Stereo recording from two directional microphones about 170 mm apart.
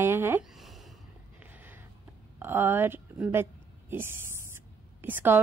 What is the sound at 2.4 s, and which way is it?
A woman's voice, 10° right (ahead or behind).